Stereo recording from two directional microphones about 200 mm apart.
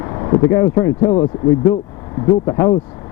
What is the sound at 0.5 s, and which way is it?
Speech, 15° left (ahead or behind).